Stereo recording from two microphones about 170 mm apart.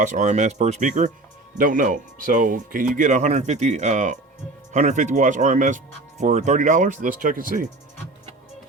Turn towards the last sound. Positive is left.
turn(degrees=-55)  # may be behind; listen again after turning